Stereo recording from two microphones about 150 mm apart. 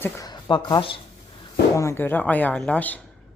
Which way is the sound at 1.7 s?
20° left (ahead or behind).